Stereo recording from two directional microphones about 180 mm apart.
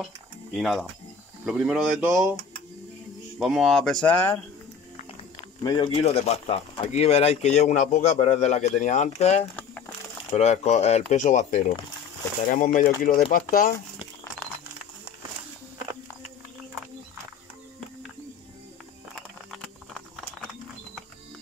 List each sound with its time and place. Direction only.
0.0 s speech: centre (ahead or behind)
3.3 s speech: centre (ahead or behind)
5.6 s speech: 25° left (ahead or behind)
5.9 s speech: 35° left (ahead or behind); by 13.7 s 50° left (ahead or behind)
14.4 s a sound: 10° left (ahead or behind)
19.5 s a sound: centre (ahead or behind)